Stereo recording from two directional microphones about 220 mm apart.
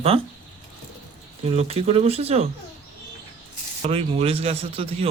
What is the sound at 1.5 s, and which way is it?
A man's voice, 30° right (ahead or behind).